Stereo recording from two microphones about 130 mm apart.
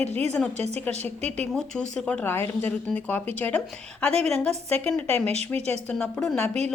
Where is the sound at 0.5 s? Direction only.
55° right (ahead or behind).